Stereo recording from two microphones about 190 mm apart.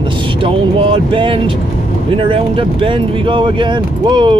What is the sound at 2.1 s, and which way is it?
Speech, 30° right (ahead or behind).